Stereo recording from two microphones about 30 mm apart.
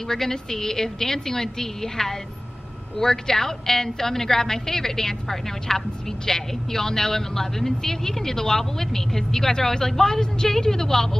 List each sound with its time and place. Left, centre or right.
0.1 s a woman's voice: centre